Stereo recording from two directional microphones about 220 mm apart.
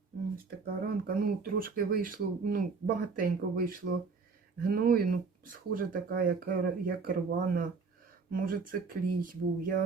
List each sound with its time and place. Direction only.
0.6 s speech: 45° right (ahead or behind)